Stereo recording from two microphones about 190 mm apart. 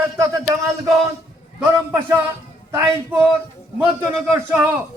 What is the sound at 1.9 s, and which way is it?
A man's voice, 15° right (ahead or behind).